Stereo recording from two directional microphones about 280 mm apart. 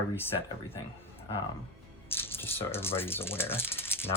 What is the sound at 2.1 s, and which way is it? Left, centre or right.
Speech, centre.